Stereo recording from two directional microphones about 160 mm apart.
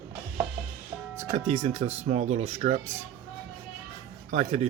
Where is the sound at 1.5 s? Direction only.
40° right (ahead or behind).